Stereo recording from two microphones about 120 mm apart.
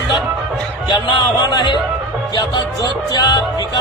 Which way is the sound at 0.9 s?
40° left (ahead or behind).